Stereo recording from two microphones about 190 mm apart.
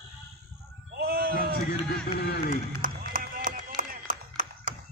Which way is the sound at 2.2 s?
55° left (ahead or behind).